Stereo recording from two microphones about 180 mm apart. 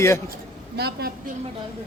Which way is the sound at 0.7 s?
65° right (ahead or behind).